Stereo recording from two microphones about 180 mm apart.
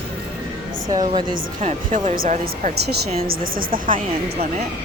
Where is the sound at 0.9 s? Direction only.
25° right (ahead or behind).